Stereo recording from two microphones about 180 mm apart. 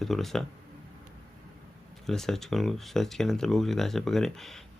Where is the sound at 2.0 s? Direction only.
Centre (ahead or behind).